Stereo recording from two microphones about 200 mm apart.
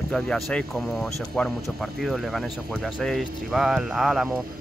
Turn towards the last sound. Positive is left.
turn(degrees=0)  # may be behind; listen again after turning